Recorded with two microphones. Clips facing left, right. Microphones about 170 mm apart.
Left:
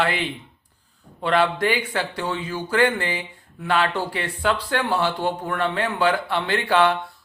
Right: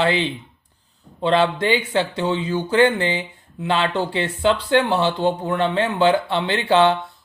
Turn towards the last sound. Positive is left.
turn(degrees=-25)  # may be behind; listen again after turning